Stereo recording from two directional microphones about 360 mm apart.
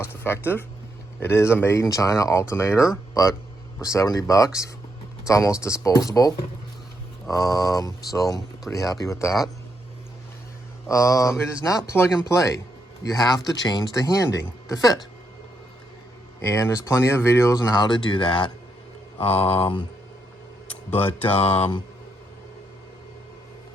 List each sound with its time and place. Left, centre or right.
0.0 s a sound: centre
1.2 s speech: centre
10.8 s speech: centre
16.4 s speech: centre
20.9 s mantra: centre
21.3 s speech: centre